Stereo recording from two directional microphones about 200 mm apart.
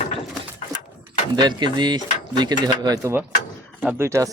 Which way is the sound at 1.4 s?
20° right (ahead or behind).